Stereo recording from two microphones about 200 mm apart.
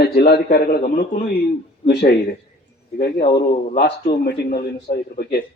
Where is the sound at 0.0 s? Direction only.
50° left (ahead or behind).